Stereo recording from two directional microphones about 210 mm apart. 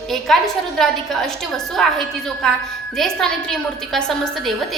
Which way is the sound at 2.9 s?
Centre (ahead or behind).